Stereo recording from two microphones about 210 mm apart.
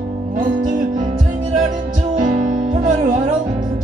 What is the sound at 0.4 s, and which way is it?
Music, 40° right (ahead or behind).